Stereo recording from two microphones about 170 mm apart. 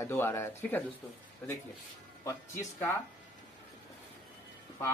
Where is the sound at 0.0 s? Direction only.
15° left (ahead or behind).